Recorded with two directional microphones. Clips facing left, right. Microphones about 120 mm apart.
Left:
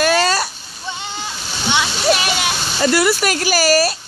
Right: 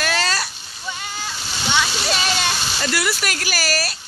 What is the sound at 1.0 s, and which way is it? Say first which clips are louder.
Splash: left 2 dB; 20° left (ahead or behind).